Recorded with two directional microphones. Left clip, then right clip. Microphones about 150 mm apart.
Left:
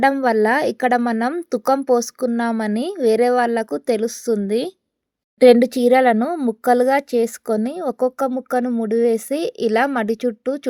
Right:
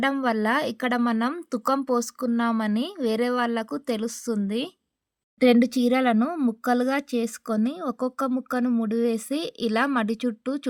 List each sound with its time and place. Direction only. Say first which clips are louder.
0.0 s a woman's voice: left 8 dB; 25° left (ahead or behind)